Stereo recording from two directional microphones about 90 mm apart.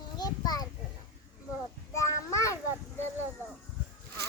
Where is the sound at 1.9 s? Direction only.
35° left (ahead or behind).